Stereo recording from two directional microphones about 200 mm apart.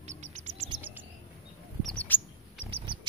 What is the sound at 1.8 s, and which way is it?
Chirp, 10° left (ahead or behind).